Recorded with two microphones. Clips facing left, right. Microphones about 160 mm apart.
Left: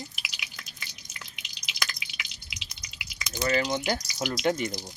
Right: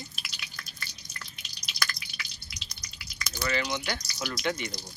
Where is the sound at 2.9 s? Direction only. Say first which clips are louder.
Left 3 dB; 20° left (ahead or behind).